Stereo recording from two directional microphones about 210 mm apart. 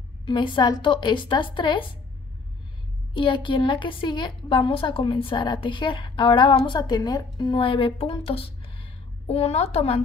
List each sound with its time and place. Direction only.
0.2 s a woman's voice: 20° left (ahead or behind)
3.2 s a woman's voice: 25° left (ahead or behind)
8.3 s a sound: 25° left (ahead or behind)